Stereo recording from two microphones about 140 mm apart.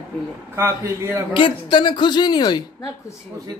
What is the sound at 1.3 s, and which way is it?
A woman's voice, 35° left (ahead or behind).